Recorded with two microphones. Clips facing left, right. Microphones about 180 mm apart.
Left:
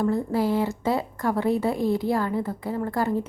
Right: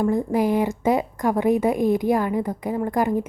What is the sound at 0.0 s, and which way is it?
A woman's voice, 15° right (ahead or behind).